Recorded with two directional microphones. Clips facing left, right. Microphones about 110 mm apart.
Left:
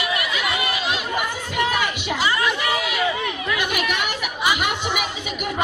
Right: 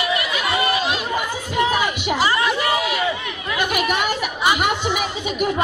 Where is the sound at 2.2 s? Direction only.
35° right (ahead or behind).